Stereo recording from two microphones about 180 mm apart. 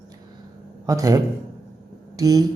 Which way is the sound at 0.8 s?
20° right (ahead or behind).